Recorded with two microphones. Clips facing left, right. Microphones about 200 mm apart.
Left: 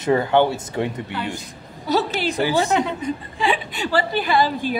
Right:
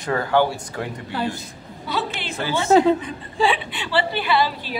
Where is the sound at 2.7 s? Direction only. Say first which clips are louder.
Right 7 dB; 35° right (ahead or behind).